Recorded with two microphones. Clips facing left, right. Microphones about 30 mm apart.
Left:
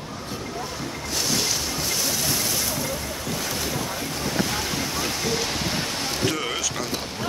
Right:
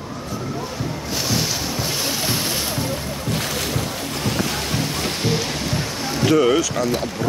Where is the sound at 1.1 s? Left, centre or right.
Centre.